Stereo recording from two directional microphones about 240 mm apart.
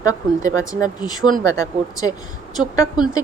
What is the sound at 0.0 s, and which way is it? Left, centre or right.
Speech, centre.